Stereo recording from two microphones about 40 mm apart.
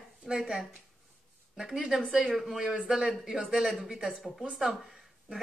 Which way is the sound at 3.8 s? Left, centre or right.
Centre.